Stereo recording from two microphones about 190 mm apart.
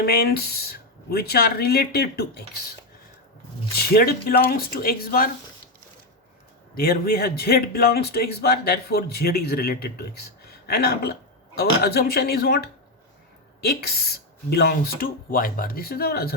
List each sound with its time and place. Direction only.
0.0 s a man's voice: 55° left (ahead or behind)
3.8 s speech: 55° left (ahead or behind)
6.7 s a man's voice: 50° left (ahead or behind)